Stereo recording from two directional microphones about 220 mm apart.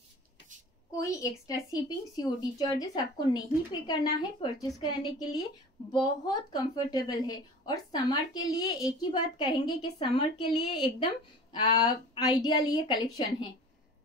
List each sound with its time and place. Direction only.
0.9 s a woman's voice: 15° left (ahead or behind)
3.3 s a woman's voice: 20° left (ahead or behind)